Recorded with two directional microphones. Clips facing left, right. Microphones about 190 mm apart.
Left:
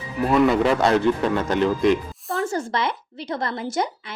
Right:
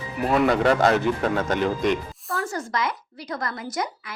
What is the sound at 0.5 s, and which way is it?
A man's voice, centre (ahead or behind).